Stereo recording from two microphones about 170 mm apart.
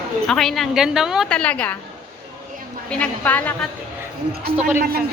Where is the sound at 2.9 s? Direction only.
10° left (ahead or behind).